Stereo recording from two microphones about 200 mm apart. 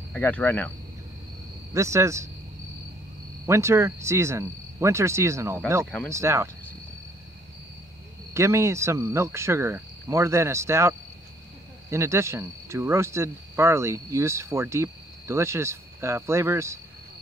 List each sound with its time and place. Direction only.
0.1 s speech: 10° left (ahead or behind)
1.7 s speech: 15° right (ahead or behind)
3.4 s speech: 15° right (ahead or behind)
8.3 s speech: 15° right (ahead or behind)